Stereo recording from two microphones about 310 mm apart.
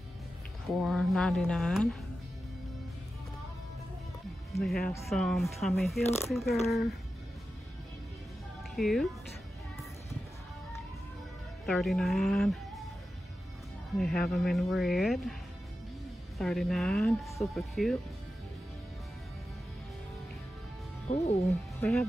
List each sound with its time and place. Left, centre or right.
0.8 s speech: centre
4.5 s speech: centre
8.7 s speech: centre
11.6 s speech: centre
14.2 s speech: centre
16.3 s speech: centre
21.1 s speech: centre
21.5 s speech: centre